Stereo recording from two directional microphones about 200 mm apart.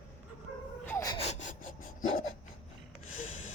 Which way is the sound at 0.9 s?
15° left (ahead or behind).